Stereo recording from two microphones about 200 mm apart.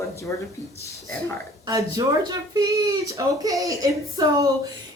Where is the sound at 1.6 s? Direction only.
20° right (ahead or behind).